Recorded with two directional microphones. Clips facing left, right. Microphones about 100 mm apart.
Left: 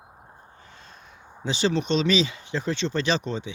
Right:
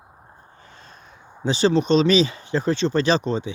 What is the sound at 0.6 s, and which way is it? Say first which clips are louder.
Speech: right 2 dB; 40° right (ahead or behind).